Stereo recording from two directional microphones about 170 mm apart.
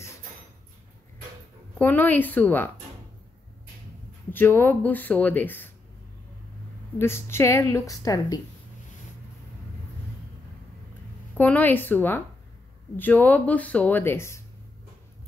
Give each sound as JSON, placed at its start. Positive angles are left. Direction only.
{"t": 1.8, "sound": "speech", "side_deg": 10}
{"t": 4.3, "sound": "speech", "side_deg": 10}
{"t": 7.0, "sound": "speech", "side_deg": 15}
{"t": 11.3, "sound": "speech", "side_deg": 10}